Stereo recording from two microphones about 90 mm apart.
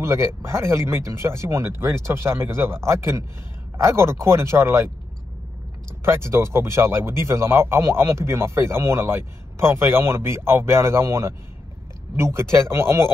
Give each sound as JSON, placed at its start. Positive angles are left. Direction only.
{"t": 0.0, "sound": "speech", "side_deg": -30}
{"t": 6.0, "sound": "speech", "side_deg": -30}